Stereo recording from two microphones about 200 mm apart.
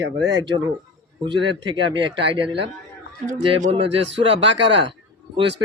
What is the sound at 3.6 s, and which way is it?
Speech, 30° right (ahead or behind).